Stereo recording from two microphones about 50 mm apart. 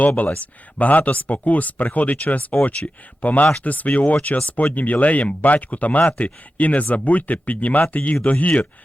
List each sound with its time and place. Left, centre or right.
0.0 s speech: left